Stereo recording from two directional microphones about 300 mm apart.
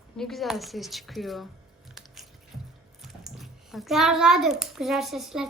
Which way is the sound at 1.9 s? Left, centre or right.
Centre.